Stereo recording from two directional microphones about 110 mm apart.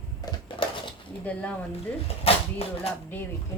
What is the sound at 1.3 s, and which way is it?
Speech, 15° left (ahead or behind).